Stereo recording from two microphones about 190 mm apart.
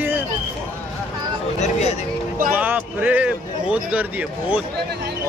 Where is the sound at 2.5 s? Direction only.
10° right (ahead or behind).